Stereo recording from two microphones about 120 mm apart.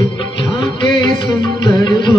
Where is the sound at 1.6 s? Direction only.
40° left (ahead or behind).